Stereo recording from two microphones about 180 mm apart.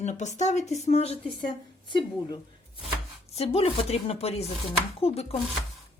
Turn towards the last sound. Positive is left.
turn(degrees=35)  # may be behind; listen again after turning